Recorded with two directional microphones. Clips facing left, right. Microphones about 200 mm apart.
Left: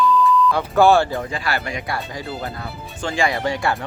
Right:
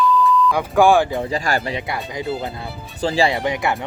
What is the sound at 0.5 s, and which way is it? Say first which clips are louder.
Speech: right 1 dB; 15° right (ahead or behind).